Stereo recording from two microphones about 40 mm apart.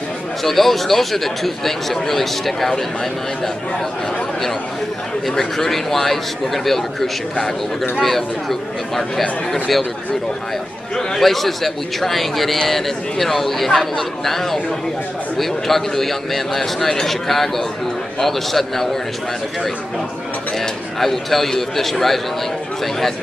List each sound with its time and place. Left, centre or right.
0.4 s a man's voice: centre
5.3 s a man's voice: centre
11.0 s a man's voice: centre
20.5 s a man's voice: centre